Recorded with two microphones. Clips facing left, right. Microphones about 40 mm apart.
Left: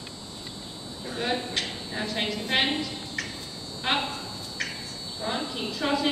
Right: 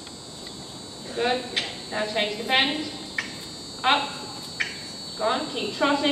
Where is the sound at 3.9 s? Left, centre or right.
Centre.